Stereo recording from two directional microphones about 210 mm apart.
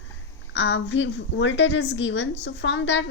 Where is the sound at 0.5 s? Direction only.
55° left (ahead or behind).